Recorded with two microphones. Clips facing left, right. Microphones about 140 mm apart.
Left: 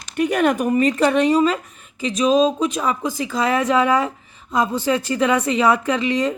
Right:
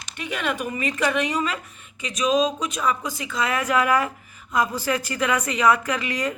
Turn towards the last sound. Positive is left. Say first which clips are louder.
# left 6 dB
turn(degrees=25)  # may be behind; listen again after turning